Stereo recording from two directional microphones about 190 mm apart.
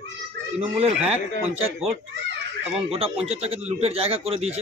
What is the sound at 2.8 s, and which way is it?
Speech, 30° right (ahead or behind).